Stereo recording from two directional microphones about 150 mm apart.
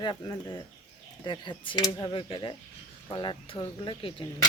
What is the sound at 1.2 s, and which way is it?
Speech, 30° left (ahead or behind).